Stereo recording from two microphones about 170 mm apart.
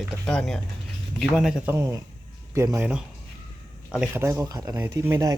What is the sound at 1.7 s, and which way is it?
Speech, 15° right (ahead or behind).